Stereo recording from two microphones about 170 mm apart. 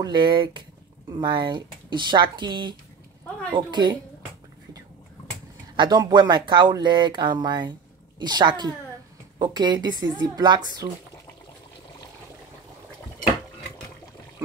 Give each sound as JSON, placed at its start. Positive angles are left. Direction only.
{"t": 0.0, "sound": "speech", "side_deg": -25}
{"t": 5.8, "sound": "speech", "side_deg": -25}